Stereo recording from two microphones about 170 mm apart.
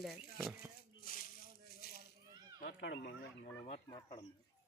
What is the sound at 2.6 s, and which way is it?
Speech, 80° left.